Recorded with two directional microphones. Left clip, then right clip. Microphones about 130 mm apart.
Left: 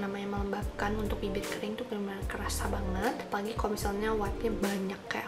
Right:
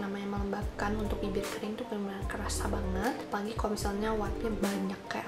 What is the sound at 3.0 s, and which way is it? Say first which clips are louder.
Speech: left 3 dB; centre (ahead or behind).